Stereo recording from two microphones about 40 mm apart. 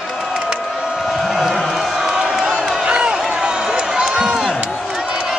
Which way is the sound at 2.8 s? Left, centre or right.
Right.